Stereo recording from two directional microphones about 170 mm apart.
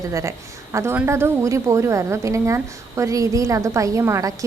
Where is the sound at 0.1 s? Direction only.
20° right (ahead or behind).